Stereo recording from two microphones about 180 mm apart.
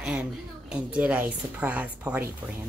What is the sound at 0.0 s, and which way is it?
A woman's voice, 5° right (ahead or behind).